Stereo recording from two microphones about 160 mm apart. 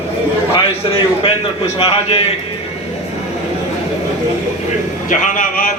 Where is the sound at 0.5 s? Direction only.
35° left (ahead or behind).